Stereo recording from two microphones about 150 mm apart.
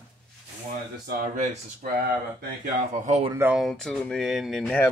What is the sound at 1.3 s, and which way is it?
Speech, 55° right (ahead or behind).